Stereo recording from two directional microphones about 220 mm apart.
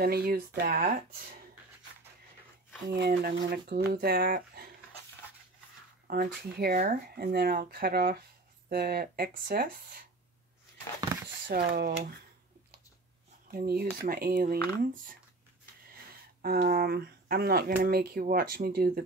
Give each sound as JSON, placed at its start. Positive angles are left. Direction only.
{"t": 0.0, "sound": "speech", "side_deg": -45}
{"t": 2.9, "sound": "speech", "side_deg": -45}
{"t": 6.0, "sound": "speech", "side_deg": -45}
{"t": 11.0, "sound": "a sound", "side_deg": -15}
{"t": 11.4, "sound": "speech", "side_deg": -40}
{"t": 13.5, "sound": "speech", "side_deg": -40}
{"t": 16.4, "sound": "speech", "side_deg": -45}